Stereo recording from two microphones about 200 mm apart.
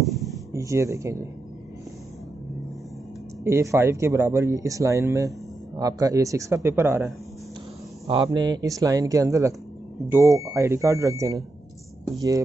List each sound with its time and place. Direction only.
0.0 s a sound: centre (ahead or behind)
0.5 s speech: 15° right (ahead or behind)
3.4 s speech: 15° right (ahead or behind)
8.1 s speech: 20° right (ahead or behind)